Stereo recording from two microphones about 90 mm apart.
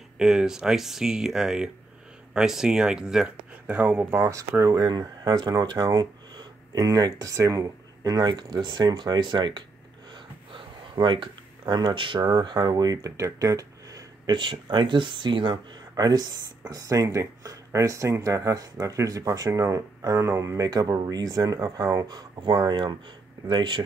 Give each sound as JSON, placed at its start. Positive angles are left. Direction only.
{"t": 0.2, "sound": "speech", "side_deg": -5}
{"t": 4.1, "sound": "speech", "side_deg": -30}
{"t": 4.8, "sound": "speech", "side_deg": -50}
{"t": 10.1, "sound": "a sound", "side_deg": -60}
{"t": 14.3, "sound": "speech", "side_deg": -65}
{"t": 16.0, "sound": "speech", "side_deg": -45}